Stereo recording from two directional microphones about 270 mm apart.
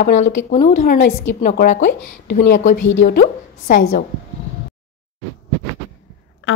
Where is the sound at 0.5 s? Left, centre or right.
Left.